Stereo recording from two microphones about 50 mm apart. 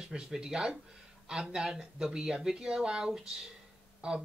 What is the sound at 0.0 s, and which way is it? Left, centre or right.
Speech, centre.